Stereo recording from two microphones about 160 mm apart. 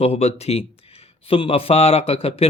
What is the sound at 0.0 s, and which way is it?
A man's voice, 40° left (ahead or behind).